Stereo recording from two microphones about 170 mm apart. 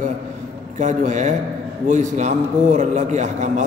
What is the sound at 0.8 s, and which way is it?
A man's voice, 45° right (ahead or behind).